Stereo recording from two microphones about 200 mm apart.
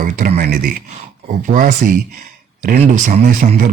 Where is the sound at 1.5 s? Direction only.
45° right (ahead or behind).